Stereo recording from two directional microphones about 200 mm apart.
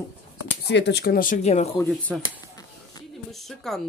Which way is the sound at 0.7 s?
60° left (ahead or behind).